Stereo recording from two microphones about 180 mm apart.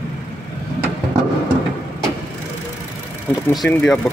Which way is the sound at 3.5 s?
5° left (ahead or behind).